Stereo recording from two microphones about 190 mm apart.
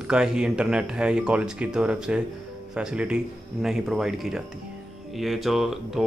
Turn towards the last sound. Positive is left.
turn(degrees=0)  # may be behind; listen again after turning